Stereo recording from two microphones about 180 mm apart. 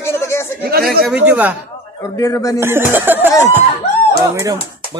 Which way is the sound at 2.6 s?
10° right (ahead or behind).